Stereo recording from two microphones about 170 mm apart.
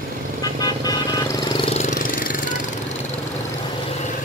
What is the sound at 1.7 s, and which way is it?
Engine, 50° left (ahead or behind).